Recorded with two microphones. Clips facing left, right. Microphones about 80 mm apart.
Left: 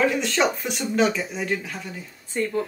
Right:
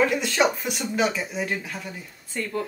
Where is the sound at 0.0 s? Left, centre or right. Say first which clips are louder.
Even; centre.